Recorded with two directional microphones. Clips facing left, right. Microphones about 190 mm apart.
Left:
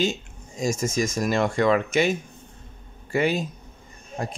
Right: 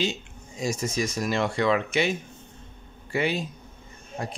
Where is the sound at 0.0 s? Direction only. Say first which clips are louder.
Left 3 dB; 45° left (ahead or behind).